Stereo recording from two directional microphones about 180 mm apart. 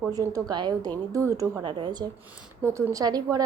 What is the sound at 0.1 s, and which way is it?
A woman's voice, 20° right (ahead or behind).